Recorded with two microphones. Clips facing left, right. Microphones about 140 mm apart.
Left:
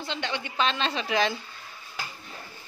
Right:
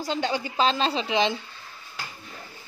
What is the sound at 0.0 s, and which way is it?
A woman's voice, 40° right (ahead or behind).